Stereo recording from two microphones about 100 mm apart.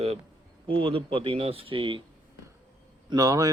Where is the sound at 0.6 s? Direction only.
65° right (ahead or behind).